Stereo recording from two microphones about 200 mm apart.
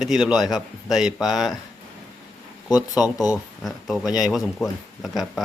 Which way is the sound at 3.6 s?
Centre (ahead or behind).